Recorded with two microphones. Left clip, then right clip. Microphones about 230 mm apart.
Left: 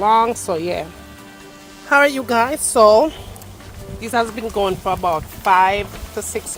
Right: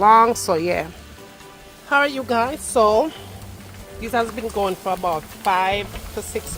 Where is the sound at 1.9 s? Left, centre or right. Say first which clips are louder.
Left 4 dB; left.